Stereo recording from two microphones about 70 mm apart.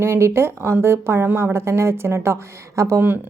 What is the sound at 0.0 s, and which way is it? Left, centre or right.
A woman's voice, right.